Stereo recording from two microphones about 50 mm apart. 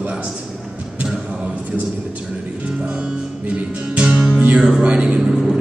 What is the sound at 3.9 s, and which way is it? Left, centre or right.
Music, centre.